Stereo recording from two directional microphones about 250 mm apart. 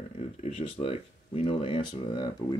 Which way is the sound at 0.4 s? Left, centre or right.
Left.